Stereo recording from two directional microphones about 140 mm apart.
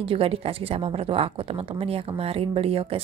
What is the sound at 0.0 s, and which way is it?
A woman's voice, 40° right (ahead or behind).